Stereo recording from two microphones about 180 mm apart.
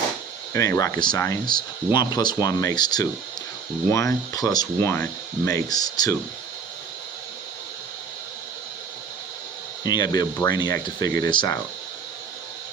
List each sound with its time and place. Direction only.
0.5 s speech: 15° left (ahead or behind)
9.8 s speech: 20° left (ahead or behind)